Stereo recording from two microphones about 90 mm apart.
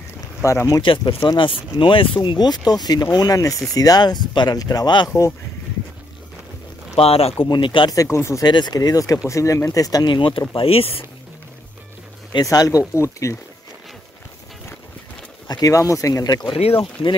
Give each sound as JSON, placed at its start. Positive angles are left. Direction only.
{"t": 0.4, "sound": "speech", "side_deg": 35}
{"t": 0.8, "sound": "speech", "side_deg": 65}
{"t": 4.6, "sound": "speech", "side_deg": 45}
{"t": 7.0, "sound": "speech", "side_deg": 90}
{"t": 7.4, "sound": "speech", "side_deg": 60}
{"t": 7.9, "sound": "speech", "side_deg": 35}
{"t": 8.5, "sound": "speech", "side_deg": 55}
{"t": 10.1, "sound": "speech", "side_deg": 75}
{"t": 10.5, "sound": "speech", "side_deg": 90}
{"t": 12.4, "sound": "speech", "side_deg": 40}
{"t": 15.4, "sound": "speech", "side_deg": 45}
{"t": 16.4, "sound": "speech", "side_deg": 80}